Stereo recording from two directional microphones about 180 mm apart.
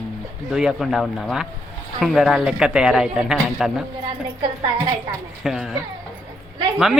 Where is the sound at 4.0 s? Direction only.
30° right (ahead or behind).